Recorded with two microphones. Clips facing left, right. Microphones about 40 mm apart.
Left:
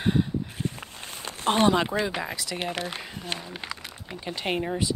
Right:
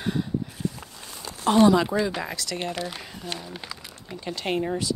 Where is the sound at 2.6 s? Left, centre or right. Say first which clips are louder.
Even; left.